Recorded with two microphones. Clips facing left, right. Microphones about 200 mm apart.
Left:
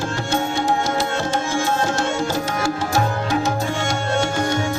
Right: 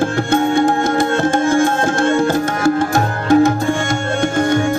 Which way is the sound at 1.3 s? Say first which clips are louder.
Right 6 dB; 55° right (ahead or behind).